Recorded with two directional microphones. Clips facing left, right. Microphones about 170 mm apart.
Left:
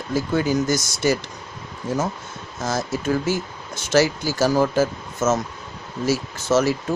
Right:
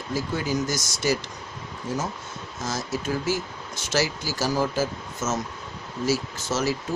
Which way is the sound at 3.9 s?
55° left (ahead or behind).